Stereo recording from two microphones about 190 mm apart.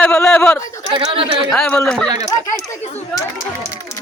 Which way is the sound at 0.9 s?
30° right (ahead or behind).